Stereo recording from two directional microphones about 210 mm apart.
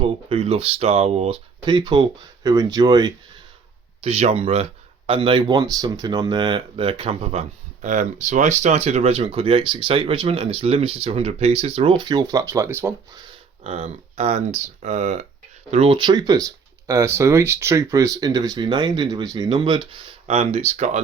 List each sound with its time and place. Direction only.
0.0 s speech: 25° right (ahead or behind)
4.0 s speech: 30° right (ahead or behind); by 13.2 s 15° right (ahead or behind)
13.7 s speech: 30° right (ahead or behind)